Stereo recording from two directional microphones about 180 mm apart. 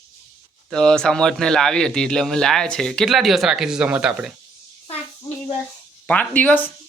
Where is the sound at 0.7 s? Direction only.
5° left (ahead or behind).